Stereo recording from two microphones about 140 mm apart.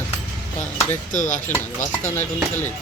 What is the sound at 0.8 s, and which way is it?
Speech, 65° left (ahead or behind).